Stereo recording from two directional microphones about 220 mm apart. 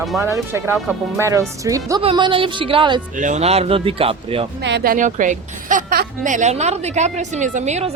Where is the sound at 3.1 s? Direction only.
35° right (ahead or behind).